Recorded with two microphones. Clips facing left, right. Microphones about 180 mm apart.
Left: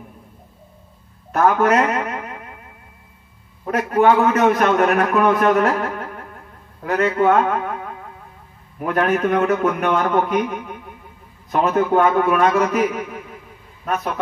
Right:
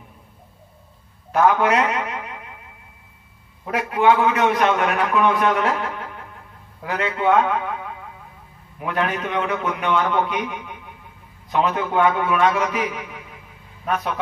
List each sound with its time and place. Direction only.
1.3 s a man's voice: 45° left (ahead or behind)
3.7 s a man's voice: 45° left (ahead or behind)